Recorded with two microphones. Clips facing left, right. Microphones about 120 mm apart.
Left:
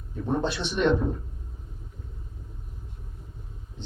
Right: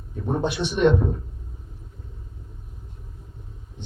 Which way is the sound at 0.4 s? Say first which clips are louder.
Right 4 dB; 15° right (ahead or behind).